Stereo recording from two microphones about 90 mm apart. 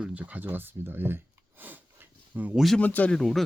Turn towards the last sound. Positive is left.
turn(degrees=0)  # may be behind; listen again after turning